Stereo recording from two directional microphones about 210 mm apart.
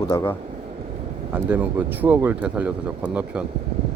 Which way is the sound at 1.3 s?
10° right (ahead or behind).